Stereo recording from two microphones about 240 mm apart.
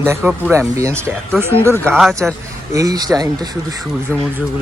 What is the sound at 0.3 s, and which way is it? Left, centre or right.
Speech, centre.